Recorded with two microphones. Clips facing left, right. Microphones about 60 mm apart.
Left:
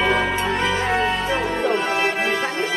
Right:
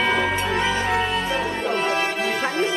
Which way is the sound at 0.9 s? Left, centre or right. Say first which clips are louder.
Left 2 dB; centre.